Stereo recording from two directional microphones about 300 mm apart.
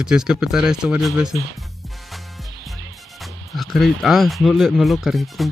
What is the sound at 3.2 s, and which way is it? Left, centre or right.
Speech, centre.